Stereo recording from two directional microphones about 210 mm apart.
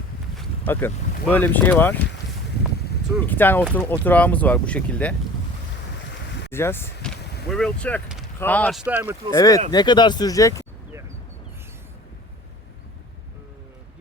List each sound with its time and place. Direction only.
0.3 s a sound: 10° left (ahead or behind)
1.3 s speech: 10° left (ahead or behind)
3.2 s speech: 10° left (ahead or behind)
6.5 s speech: 10° left (ahead or behind)
8.8 s speech: 5° right (ahead or behind)
9.3 s speech: 15° left (ahead or behind)